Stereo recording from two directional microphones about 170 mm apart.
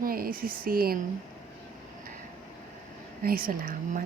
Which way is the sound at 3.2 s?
60° right (ahead or behind).